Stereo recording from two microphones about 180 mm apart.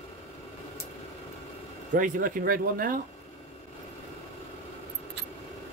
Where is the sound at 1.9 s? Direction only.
50° right (ahead or behind).